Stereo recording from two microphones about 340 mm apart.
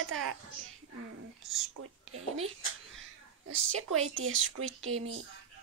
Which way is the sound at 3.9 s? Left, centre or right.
Right.